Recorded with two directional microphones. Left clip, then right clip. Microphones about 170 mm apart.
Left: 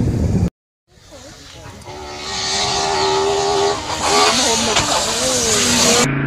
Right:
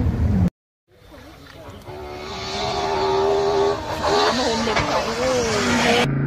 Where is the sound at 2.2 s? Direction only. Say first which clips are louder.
Left 7 dB; centre (ahead or behind).